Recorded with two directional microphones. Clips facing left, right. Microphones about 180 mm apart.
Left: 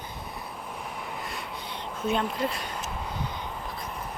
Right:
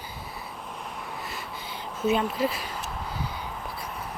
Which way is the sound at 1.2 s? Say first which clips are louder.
Left 1 dB; centre (ahead or behind).